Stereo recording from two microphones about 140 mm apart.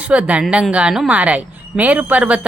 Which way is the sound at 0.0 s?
10° right (ahead or behind).